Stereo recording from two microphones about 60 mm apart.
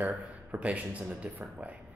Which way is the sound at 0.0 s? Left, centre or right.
Right.